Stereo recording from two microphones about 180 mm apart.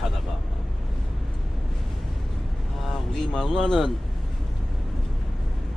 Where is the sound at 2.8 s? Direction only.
5° left (ahead or behind).